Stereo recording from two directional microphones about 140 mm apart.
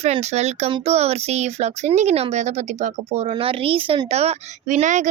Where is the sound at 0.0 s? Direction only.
50° right (ahead or behind).